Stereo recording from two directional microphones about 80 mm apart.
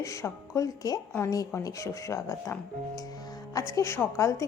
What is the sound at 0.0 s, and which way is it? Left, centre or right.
A woman's voice, left.